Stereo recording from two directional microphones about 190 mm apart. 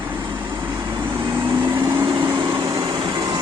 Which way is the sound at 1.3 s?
20° right (ahead or behind).